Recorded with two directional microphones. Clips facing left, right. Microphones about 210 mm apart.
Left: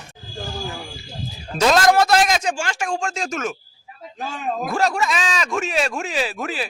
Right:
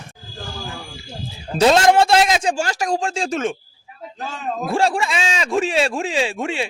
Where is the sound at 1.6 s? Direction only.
25° right (ahead or behind).